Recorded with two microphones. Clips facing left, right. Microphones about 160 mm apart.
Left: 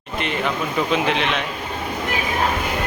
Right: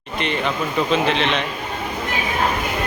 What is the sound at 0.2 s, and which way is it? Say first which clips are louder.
A man's voice: right 1 dB; 5° left (ahead or behind).